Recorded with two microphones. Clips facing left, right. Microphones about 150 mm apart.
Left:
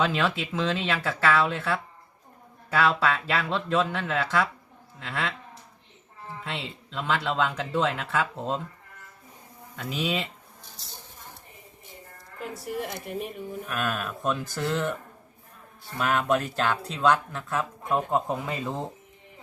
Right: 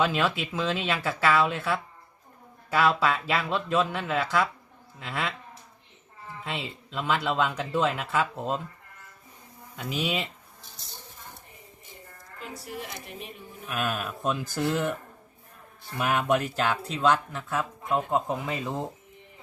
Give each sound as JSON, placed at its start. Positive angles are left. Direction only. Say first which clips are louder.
{"t": 0.0, "sound": "speech", "louder": "even", "side_deg": -5}
{"t": 6.4, "sound": "speech", "louder": "right 2 dB", "side_deg": -5}
{"t": 9.7, "sound": "speech", "louder": "left 1 dB", "side_deg": -5}
{"t": 12.6, "sound": "speech", "louder": "left 8 dB", "side_deg": 50}
{"t": 13.7, "sound": "speech", "louder": "right 1 dB", "side_deg": -5}
{"t": 16.0, "sound": "speech", "louder": "even", "side_deg": -10}